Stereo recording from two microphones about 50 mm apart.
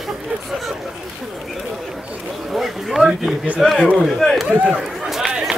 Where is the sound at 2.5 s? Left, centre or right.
Centre.